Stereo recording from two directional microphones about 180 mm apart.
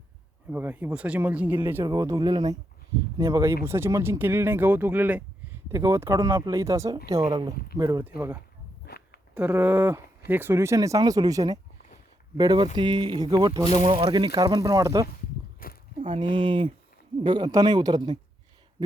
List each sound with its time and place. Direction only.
0.5 s speech: 10° right (ahead or behind)
9.3 s speech: 10° right (ahead or behind)
15.6 s biting: 55° left (ahead or behind)
16.0 s speech: 25° right (ahead or behind)